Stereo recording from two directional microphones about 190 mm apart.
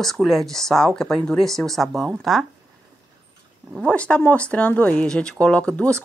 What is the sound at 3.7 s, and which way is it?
Speech, 5° left (ahead or behind).